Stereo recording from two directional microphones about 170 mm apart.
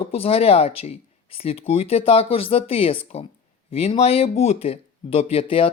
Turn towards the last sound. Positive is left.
turn(degrees=35)  # may be behind; listen again after turning